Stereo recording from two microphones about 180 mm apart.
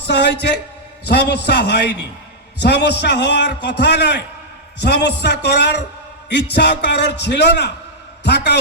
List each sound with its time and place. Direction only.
0.1 s a man's voice: 70° left (ahead or behind)